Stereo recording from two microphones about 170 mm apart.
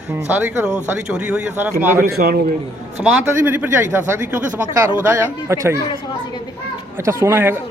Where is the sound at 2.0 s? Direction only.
65° right (ahead or behind).